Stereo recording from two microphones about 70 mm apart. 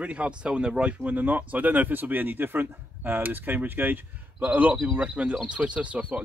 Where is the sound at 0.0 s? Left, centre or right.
Centre.